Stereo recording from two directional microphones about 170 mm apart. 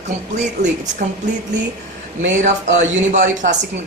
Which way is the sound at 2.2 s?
45° right (ahead or behind).